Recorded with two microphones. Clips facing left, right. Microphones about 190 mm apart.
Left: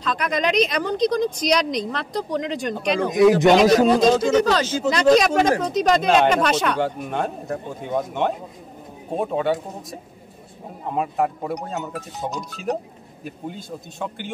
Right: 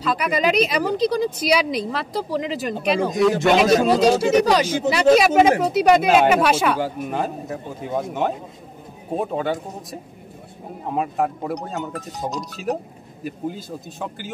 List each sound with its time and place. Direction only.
0.0 s a woman's voice: 5° right (ahead or behind)
3.1 s a man's voice: 20° left (ahead or behind)
4.0 s a woman's voice: 10° right (ahead or behind)